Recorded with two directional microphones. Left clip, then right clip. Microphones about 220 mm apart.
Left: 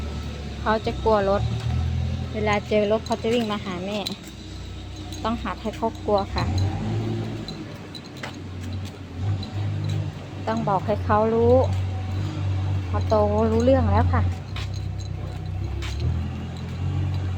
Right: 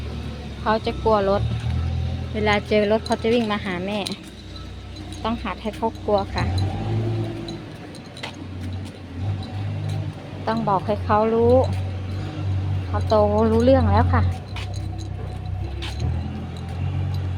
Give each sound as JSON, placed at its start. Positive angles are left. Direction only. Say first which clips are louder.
{"t": 0.6, "sound": "speech", "louder": "right 2 dB", "side_deg": -10}
{"t": 2.3, "sound": "speech", "louder": "right 2 dB", "side_deg": -20}
{"t": 5.2, "sound": "speech", "louder": "right 1 dB", "side_deg": -10}
{"t": 10.4, "sound": "speech", "louder": "right 2 dB", "side_deg": -15}
{"t": 12.9, "sound": "speech", "louder": "right 3 dB", "side_deg": -15}